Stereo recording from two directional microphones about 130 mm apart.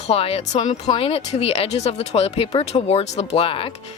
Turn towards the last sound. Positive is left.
turn(degrees=45)  # may be behind; listen again after turning